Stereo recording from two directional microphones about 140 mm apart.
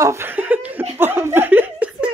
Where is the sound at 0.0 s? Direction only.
20° right (ahead or behind).